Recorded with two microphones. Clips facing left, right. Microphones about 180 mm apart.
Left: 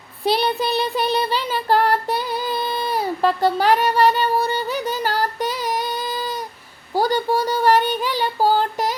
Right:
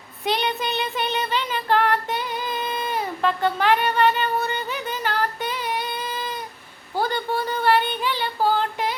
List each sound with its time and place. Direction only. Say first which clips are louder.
0.3 s child singing: left 5 dB; 35° left (ahead or behind)